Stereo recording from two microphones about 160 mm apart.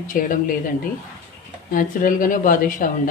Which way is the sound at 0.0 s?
55° left (ahead or behind).